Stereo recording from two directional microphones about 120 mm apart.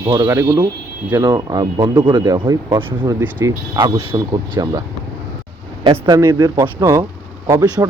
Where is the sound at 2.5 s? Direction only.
20° right (ahead or behind).